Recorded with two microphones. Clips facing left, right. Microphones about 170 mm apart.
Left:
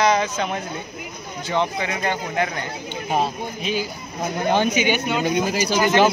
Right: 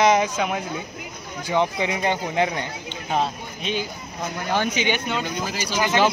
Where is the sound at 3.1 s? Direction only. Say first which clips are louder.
Left 1 dB; 5° left (ahead or behind).